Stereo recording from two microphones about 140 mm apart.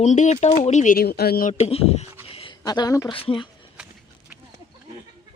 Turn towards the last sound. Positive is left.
turn(degrees=40)  # may be behind; listen again after turning